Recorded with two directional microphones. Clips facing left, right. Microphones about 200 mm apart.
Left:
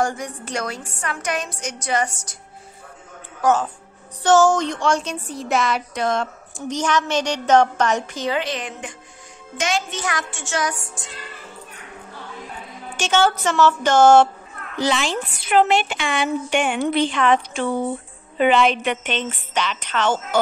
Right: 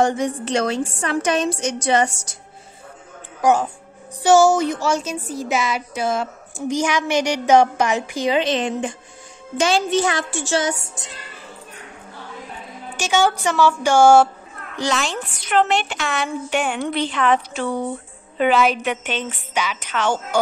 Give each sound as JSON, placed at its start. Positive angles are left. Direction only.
{"t": 0.0, "sound": "a woman's voice", "side_deg": -20}
{"t": 3.3, "sound": "a woman's voice", "side_deg": -15}
{"t": 8.4, "sound": "a woman's voice", "side_deg": -25}
{"t": 9.6, "sound": "music", "side_deg": -30}
{"t": 12.9, "sound": "a woman's voice", "side_deg": -10}
{"t": 14.8, "sound": "a woman's voice", "side_deg": 0}